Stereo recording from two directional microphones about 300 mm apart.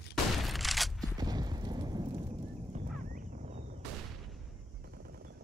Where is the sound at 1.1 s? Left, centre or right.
Centre.